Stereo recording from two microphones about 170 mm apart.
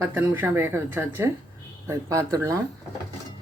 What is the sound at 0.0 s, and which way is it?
A woman's voice, 10° right (ahead or behind).